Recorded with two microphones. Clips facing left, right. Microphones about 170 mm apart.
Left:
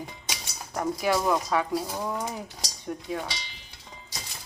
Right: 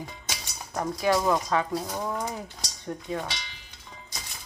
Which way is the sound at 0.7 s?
5° left (ahead or behind).